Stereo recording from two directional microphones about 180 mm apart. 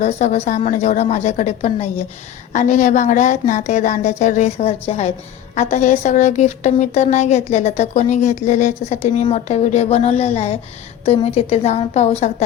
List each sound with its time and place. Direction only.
0.0 s a woman's voice: 40° left (ahead or behind)